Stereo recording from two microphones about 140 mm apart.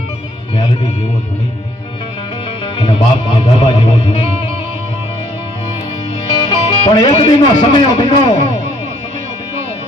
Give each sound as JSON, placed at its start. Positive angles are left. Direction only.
{"t": 2.7, "sound": "a man's voice", "side_deg": 35}
{"t": 6.5, "sound": "music", "side_deg": 30}
{"t": 6.9, "sound": "speech", "side_deg": 45}